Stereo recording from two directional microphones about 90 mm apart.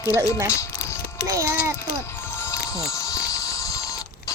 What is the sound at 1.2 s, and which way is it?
Speech, 35° right (ahead or behind).